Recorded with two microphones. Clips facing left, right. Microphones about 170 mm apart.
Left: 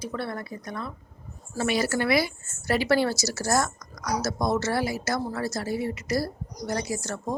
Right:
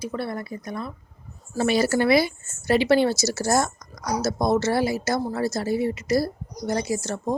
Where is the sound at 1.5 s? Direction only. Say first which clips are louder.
Right 5 dB; 30° right (ahead or behind).